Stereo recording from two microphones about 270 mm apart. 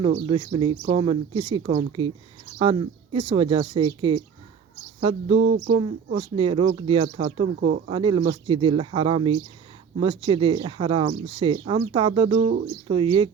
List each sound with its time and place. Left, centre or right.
0.0 s speech: centre
5.4 s speech: right
5.7 s speech: right